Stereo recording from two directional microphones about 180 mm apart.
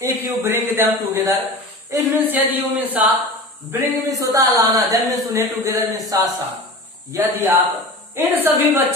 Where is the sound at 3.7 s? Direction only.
15° right (ahead or behind).